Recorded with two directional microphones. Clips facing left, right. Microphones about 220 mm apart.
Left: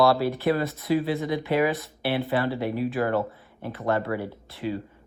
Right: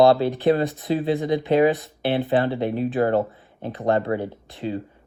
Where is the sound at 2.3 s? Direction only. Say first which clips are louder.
Right 4 dB; 20° right (ahead or behind).